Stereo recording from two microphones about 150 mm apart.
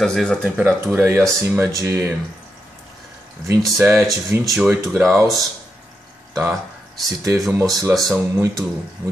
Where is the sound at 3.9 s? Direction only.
15° right (ahead or behind).